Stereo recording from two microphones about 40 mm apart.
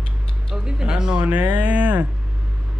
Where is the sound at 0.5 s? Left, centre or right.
Right.